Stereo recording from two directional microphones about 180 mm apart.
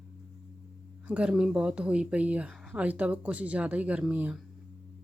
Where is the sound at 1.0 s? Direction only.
5° right (ahead or behind).